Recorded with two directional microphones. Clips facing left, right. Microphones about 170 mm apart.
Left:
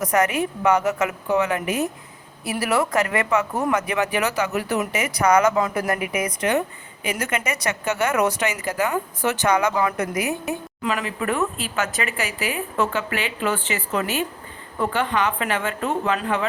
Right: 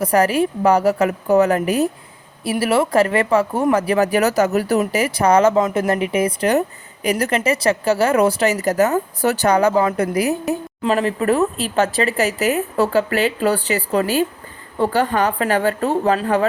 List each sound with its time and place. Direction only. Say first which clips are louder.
0.0 s speech: right 5 dB; 30° right (ahead or behind)